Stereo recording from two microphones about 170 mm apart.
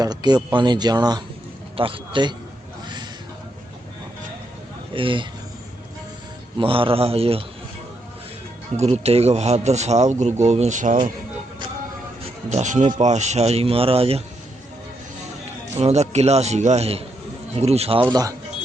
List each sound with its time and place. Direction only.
0.0 s speech: 25° right (ahead or behind)
4.9 s speech: 30° right (ahead or behind)
6.6 s speech: 30° right (ahead or behind)
8.7 s speech: 40° right (ahead or behind)
12.5 s speech: 45° right (ahead or behind)
15.7 s speech: 40° right (ahead or behind)
18.1 s speech: 20° right (ahead or behind)